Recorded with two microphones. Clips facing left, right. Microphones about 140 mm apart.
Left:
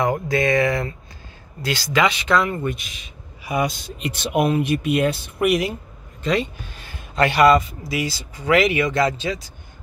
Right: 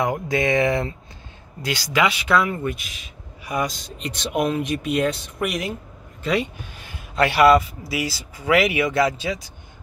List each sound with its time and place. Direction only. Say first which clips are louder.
0.0 s speech: left 2 dB; 15° right (ahead or behind)
1.6 s speech: left 1 dB; 15° right (ahead or behind); by 5.8 s 5° left (ahead or behind)
6.2 s a man's voice: left 1 dB; 10° right (ahead or behind)